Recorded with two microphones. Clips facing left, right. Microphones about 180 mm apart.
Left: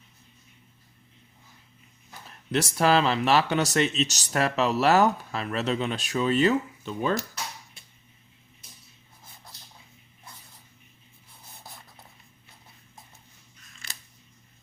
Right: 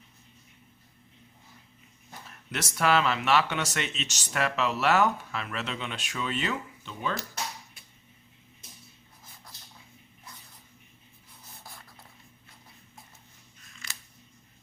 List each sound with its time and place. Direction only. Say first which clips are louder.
2.5 s speech: left 4 dB; 30° left (ahead or behind)
10.3 s a sound: left 1 dB; 30° left (ahead or behind)
11.6 s writing: left 2 dB; 20° left (ahead or behind)